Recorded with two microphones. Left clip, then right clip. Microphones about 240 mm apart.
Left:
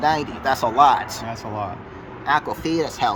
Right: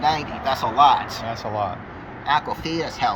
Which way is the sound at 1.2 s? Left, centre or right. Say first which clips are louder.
Right 3 dB; centre.